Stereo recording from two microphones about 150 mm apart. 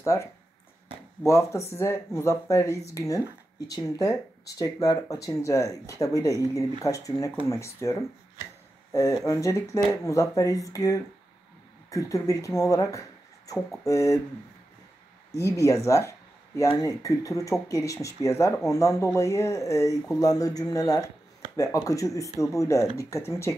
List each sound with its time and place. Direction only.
0.0 s speech: 20° left (ahead or behind)
1.7 s speech: 15° left (ahead or behind)
15.3 s speech: 20° left (ahead or behind)